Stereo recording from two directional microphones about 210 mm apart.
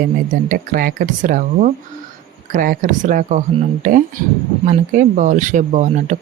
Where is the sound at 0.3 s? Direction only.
40° right (ahead or behind).